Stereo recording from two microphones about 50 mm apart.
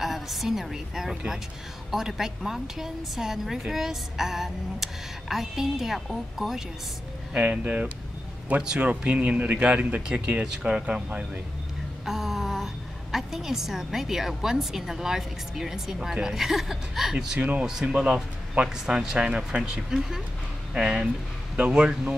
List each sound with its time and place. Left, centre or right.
0.0 s a woman's voice: centre
7.3 s speech: right
12.0 s a woman's voice: centre
17.4 s speech: right
17.6 s a woman's voice: centre